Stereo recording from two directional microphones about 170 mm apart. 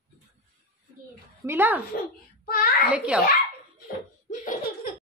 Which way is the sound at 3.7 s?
50° left (ahead or behind).